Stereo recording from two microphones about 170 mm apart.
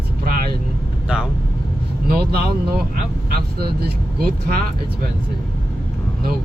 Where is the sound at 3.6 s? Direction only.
65° right (ahead or behind).